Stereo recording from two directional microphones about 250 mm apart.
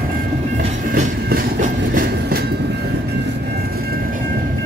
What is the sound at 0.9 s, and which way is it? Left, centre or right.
Train, right.